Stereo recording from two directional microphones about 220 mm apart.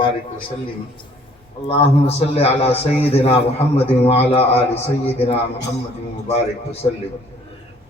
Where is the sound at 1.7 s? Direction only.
25° left (ahead or behind).